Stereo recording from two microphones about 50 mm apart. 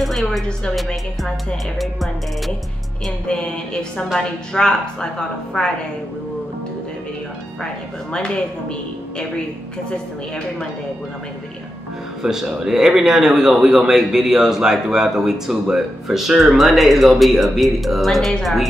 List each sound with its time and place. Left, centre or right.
0.0 s music: centre
1.8 s music: centre
3.3 s music: centre
4.2 s a woman's voice: centre
7.6 s a woman's voice: centre
9.8 s a woman's voice: centre
12.2 s a man's voice: centre
18.4 s music: centre